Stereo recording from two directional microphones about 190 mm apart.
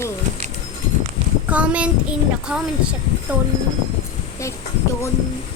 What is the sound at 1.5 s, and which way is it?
Child singing, 5° right (ahead or behind).